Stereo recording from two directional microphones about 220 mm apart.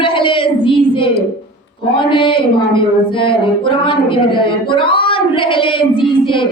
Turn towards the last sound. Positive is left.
turn(degrees=25)  # may be behind; listen again after turning